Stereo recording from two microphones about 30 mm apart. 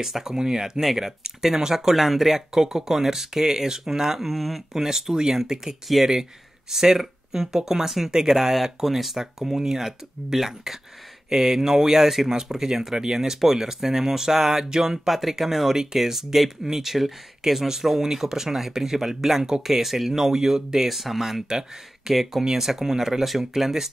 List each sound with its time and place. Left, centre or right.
0.0 s speech: centre
2.5 s speech: centre
9.2 s speech: centre
22.1 s speech: centre